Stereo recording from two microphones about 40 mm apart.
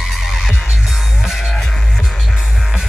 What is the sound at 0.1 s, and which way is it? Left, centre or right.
Music, centre.